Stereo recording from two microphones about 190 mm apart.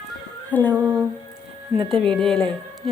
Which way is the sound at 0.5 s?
10° left (ahead or behind).